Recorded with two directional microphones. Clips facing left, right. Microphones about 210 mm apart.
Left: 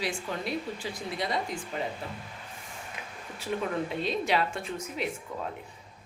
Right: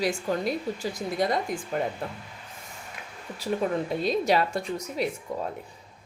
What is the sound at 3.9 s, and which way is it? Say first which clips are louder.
Speech: right 6 dB; 40° right (ahead or behind).